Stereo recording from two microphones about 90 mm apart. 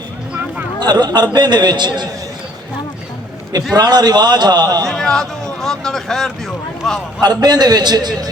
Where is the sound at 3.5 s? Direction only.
50° right (ahead or behind).